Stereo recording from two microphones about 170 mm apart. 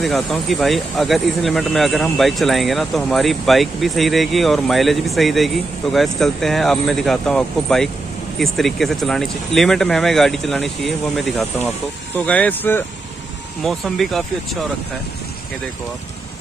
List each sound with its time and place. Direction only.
0.0 s speech: centre (ahead or behind)